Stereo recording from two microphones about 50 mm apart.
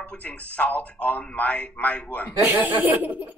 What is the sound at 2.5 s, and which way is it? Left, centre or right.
Speech, right.